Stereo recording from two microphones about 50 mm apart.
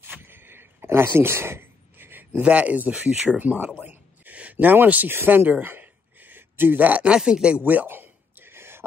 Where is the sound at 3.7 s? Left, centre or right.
Right.